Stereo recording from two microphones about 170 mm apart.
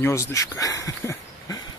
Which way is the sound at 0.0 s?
15° left (ahead or behind).